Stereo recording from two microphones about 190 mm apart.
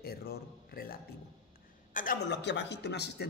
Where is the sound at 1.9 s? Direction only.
55° left (ahead or behind).